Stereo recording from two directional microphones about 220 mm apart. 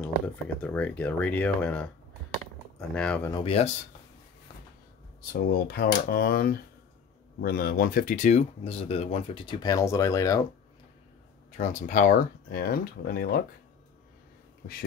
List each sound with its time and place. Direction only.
0.6 s speech: 5° left (ahead or behind)
2.9 s speech: 5° left (ahead or behind)
3.4 s speech: 25° left (ahead or behind)
5.3 s speech: 45° left (ahead or behind); by 10.4 s 15° left (ahead or behind)
11.5 s speech: 35° left (ahead or behind)